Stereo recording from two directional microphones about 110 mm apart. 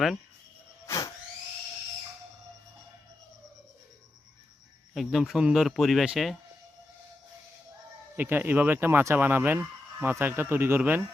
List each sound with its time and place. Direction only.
0.9 s a sound: 30° left (ahead or behind)
4.9 s speech: centre (ahead or behind)
8.1 s speech: 15° right (ahead or behind)